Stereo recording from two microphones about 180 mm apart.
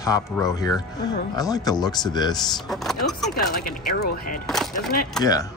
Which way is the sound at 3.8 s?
55° left (ahead or behind).